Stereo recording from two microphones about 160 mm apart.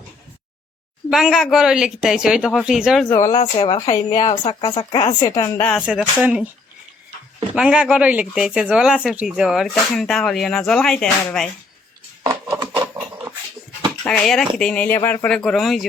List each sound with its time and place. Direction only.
1.1 s speech: centre (ahead or behind)
3.1 s speech: 20° left (ahead or behind)
5.5 s speech: 10° left (ahead or behind)
5.8 s speech: 5° right (ahead or behind)
7.5 s speech: 5° right (ahead or behind)
12.2 s a sound: 20° right (ahead or behind)
14.1 s speech: 5° left (ahead or behind)